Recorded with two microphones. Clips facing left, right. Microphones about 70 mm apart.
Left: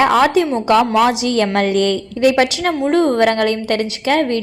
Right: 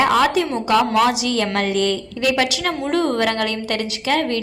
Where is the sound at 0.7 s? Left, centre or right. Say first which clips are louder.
Left 2 dB; left.